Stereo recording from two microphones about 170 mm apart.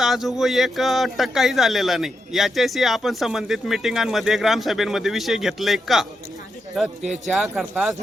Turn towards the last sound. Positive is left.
turn(degrees=0)  # may be behind; listen again after turning